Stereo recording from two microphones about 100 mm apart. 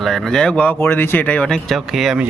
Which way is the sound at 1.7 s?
5° right (ahead or behind).